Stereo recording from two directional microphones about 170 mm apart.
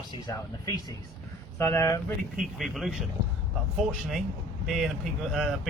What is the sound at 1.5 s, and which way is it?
Speech, 15° left (ahead or behind).